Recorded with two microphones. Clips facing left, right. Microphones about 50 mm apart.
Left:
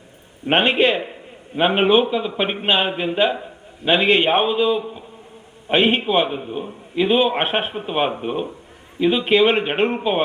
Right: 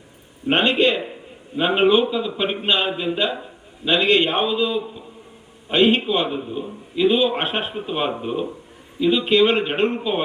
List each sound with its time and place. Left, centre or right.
0.4 s a man's voice: left
4.3 s a man's voice: left
6.1 s a man's voice: left